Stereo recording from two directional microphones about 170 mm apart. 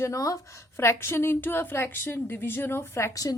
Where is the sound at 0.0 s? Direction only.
20° left (ahead or behind).